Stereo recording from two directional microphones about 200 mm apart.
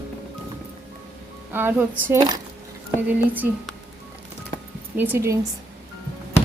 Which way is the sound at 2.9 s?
10° right (ahead or behind).